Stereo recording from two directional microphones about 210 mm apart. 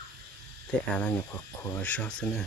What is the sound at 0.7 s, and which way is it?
Speech, 5° left (ahead or behind).